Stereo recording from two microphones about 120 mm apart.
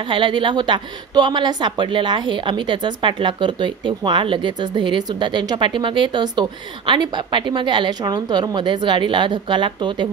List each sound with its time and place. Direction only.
0.1 s speech: 45° right (ahead or behind)